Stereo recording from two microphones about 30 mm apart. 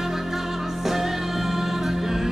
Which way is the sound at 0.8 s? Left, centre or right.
Centre.